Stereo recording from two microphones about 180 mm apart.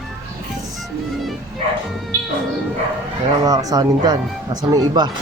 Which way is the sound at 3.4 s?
20° right (ahead or behind).